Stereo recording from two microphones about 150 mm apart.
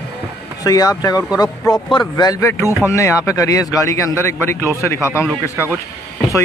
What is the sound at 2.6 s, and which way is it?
Speech, 20° right (ahead or behind).